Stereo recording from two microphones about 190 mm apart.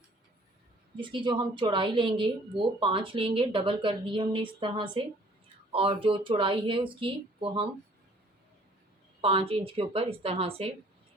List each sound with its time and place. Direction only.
0.9 s a woman's voice: 25° right (ahead or behind)
9.2 s a woman's voice: 30° right (ahead or behind)